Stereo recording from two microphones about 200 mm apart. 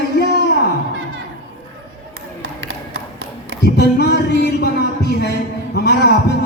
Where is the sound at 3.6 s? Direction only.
55° left (ahead or behind).